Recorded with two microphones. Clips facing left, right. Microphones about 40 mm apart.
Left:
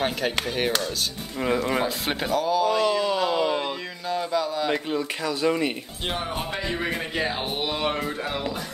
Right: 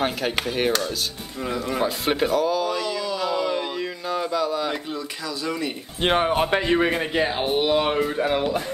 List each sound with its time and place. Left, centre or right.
0.0 s speech: centre
2.8 s a sound: left
3.2 s a sound: centre
4.1 s speech: centre
4.9 s speech: left
6.0 s a man's voice: right
6.8 s speech: right
7.2 s speech: centre
8.2 s speech: centre